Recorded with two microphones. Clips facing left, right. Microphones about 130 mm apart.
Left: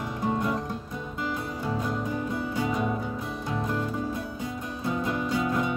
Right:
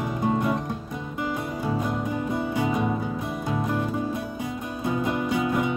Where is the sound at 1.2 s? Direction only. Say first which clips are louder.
Right 3 dB; 20° right (ahead or behind).